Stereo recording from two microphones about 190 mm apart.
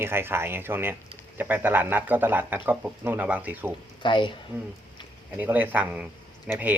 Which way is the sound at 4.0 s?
25° left (ahead or behind).